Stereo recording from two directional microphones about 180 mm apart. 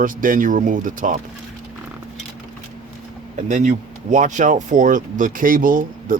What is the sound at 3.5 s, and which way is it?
Speech, 45° right (ahead or behind).